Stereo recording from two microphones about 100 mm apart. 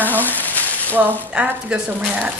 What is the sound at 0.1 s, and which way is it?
Frying, 20° left (ahead or behind).